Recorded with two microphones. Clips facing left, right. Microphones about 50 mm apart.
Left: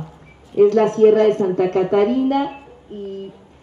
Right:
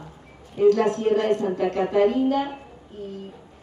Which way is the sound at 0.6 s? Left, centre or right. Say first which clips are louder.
Left 6 dB; left.